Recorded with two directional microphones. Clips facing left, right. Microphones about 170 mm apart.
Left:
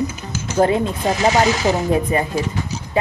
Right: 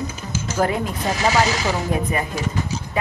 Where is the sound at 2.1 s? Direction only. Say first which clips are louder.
Left 5 dB; 30° left (ahead or behind).